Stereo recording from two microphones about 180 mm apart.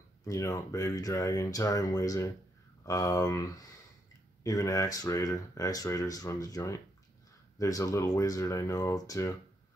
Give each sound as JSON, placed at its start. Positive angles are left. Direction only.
{"t": 0.2, "sound": "speech", "side_deg": 20}